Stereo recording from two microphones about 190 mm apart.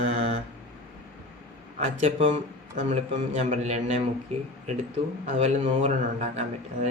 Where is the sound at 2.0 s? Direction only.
30° right (ahead or behind).